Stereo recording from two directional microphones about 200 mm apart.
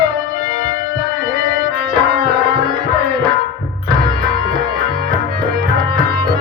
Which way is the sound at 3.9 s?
20° right (ahead or behind).